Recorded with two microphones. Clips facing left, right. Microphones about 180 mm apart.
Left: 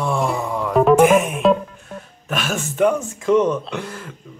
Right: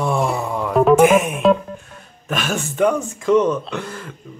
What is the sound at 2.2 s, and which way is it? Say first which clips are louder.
Speech: right 1 dB; centre (ahead or behind).